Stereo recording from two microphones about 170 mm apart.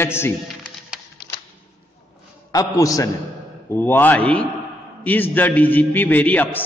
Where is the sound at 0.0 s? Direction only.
15° left (ahead or behind).